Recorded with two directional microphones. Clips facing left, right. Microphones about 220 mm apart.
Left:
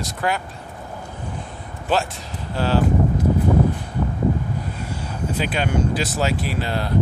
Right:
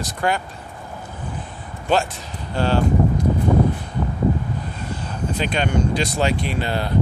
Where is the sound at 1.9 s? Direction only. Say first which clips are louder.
Right 2 dB; centre (ahead or behind).